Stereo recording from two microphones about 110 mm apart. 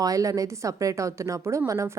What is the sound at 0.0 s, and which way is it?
A woman's voice, 30° right (ahead or behind).